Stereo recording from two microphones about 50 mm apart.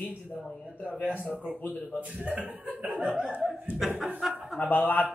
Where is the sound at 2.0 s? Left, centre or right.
Right.